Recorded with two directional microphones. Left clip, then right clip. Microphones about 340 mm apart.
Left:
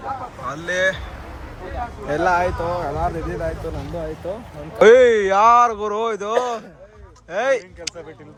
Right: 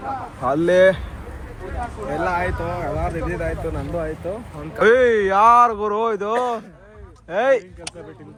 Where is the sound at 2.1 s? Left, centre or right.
Centre.